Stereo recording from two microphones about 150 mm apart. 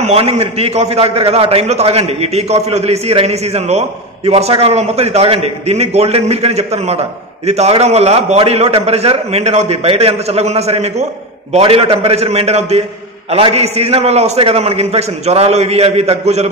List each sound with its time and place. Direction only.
0.0 s a man's voice: 45° right (ahead or behind)